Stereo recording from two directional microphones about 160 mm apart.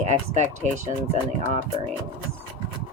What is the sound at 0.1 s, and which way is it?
Speech, 45° right (ahead or behind).